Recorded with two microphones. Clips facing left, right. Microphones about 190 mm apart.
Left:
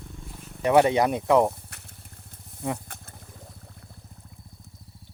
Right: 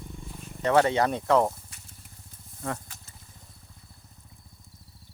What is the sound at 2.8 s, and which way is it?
Vehicle, 55° left (ahead or behind).